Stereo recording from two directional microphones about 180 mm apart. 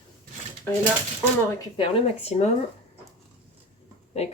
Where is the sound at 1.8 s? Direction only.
35° left (ahead or behind).